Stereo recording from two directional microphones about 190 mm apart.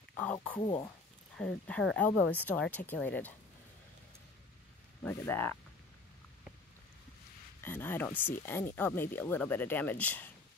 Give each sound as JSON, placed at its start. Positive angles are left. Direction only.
{"t": 0.2, "sound": "speech", "side_deg": 5}
{"t": 0.6, "sound": "speech", "side_deg": 20}
{"t": 1.3, "sound": "speech", "side_deg": 5}
{"t": 5.0, "sound": "speech", "side_deg": 10}
{"t": 7.6, "sound": "speech", "side_deg": 10}